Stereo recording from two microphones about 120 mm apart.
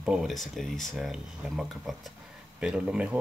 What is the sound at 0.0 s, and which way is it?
Speech, 5° right (ahead or behind).